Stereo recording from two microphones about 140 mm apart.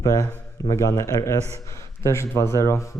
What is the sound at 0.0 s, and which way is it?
A man's voice, 25° left (ahead or behind).